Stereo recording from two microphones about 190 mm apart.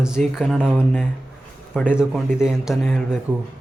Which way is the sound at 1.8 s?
5° right (ahead or behind).